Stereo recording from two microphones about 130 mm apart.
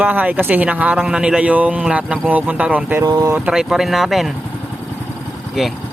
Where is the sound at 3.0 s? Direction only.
25° right (ahead or behind).